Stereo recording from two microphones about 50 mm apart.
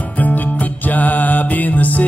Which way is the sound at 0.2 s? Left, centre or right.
Left.